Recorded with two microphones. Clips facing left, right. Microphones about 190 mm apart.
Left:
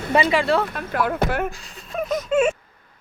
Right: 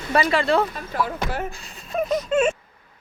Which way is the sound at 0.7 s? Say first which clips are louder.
Left 3 dB; 60° left (ahead or behind).